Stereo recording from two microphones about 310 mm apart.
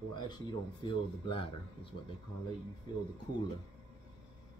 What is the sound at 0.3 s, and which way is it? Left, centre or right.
Speech, centre.